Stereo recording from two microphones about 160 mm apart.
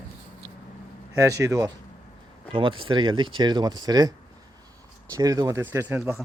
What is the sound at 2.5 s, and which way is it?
Speech, 30° right (ahead or behind).